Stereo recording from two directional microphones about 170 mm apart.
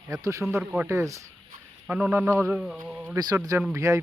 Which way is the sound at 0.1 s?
20° right (ahead or behind).